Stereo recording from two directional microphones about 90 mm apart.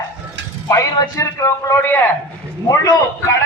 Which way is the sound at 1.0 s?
35° left (ahead or behind).